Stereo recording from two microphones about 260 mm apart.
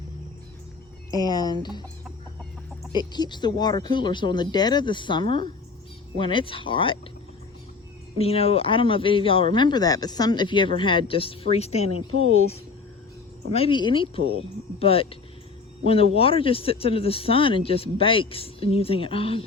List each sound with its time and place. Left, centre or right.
1.1 s speech: centre
2.9 s speech: centre
8.2 s speech: left
12.1 s speech: right
13.5 s speech: left